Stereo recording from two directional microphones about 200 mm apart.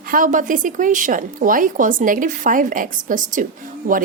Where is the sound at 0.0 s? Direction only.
45° right (ahead or behind).